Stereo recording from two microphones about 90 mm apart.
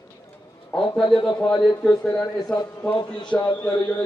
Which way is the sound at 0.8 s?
65° left (ahead or behind).